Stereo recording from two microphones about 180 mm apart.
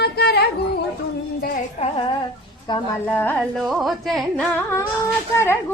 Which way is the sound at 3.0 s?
10° left (ahead or behind).